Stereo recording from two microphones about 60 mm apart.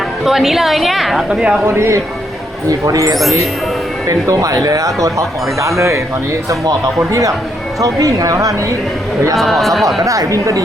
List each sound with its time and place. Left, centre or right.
0.3 s a woman's voice: centre
1.3 s speech: centre
1.6 s speech: right
2.6 s speech: right
4.3 s speech: right
6.5 s speech: right
9.3 s a woman's voice: centre
10.0 s speech: right